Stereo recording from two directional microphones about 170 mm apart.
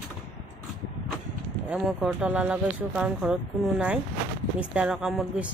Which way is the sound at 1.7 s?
5° right (ahead or behind).